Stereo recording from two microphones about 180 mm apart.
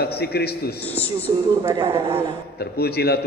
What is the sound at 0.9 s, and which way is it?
Speech, 10° left (ahead or behind).